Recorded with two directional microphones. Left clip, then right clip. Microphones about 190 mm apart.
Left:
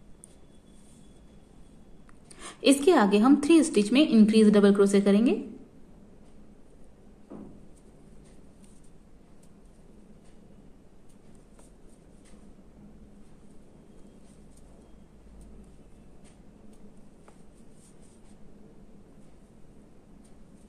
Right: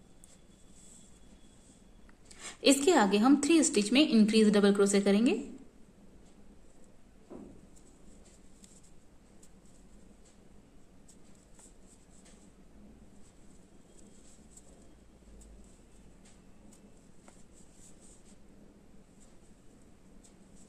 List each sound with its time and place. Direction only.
2.3 s a woman's voice: 5° left (ahead or behind)